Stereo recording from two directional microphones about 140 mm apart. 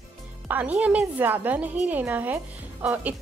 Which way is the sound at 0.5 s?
10° right (ahead or behind).